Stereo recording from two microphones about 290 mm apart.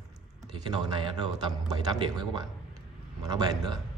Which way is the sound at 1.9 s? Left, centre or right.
Centre.